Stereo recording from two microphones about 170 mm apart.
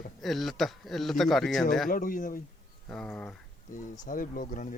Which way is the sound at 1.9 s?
55° left (ahead or behind).